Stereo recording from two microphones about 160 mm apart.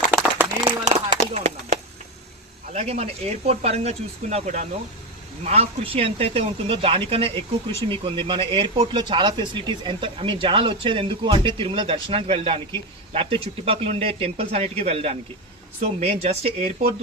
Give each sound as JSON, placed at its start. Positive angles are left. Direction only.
{"t": 0.6, "sound": "a sound", "side_deg": -40}
{"t": 2.7, "sound": "speech", "side_deg": -40}
{"t": 7.3, "sound": "speech", "side_deg": 15}
{"t": 7.9, "sound": "speech", "side_deg": -30}